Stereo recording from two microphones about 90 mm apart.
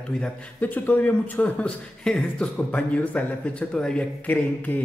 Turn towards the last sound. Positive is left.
turn(degrees=15)  # may be behind; listen again after turning